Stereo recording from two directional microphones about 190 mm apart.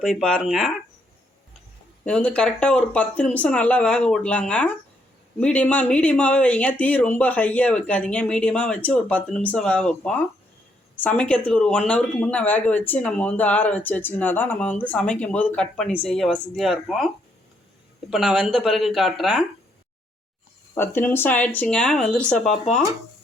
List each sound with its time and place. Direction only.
0.0 s speech: centre (ahead or behind)
2.0 s speech: 5° left (ahead or behind)
18.1 s speech: centre (ahead or behind)
20.7 s speech: 10° left (ahead or behind)